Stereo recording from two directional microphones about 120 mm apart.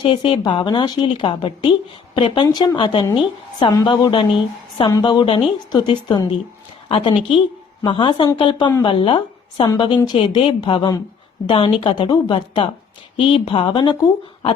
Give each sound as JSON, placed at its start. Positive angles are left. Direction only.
{"t": 0.0, "sound": "a woman's voice", "side_deg": 45}